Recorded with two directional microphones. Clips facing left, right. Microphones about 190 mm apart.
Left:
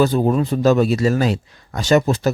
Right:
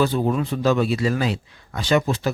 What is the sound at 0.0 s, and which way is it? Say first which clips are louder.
Speech: left 4 dB; 40° left (ahead or behind).